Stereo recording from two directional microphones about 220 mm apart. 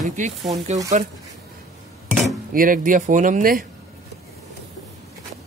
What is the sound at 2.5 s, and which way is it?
A man's voice, 40° right (ahead or behind).